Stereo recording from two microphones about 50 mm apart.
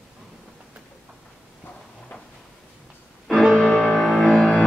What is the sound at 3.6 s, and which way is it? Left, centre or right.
Music, centre.